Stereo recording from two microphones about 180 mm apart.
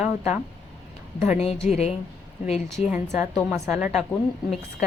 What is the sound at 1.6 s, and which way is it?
Speech, 35° left (ahead or behind).